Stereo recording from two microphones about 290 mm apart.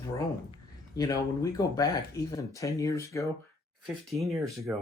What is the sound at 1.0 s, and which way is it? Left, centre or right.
Speech, centre.